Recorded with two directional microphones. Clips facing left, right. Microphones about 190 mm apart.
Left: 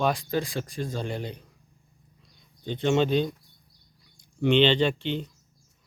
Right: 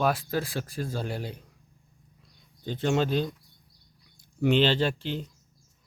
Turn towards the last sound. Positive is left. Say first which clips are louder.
# left 3 dB
turn(degrees=-5)  # may be behind; listen again after turning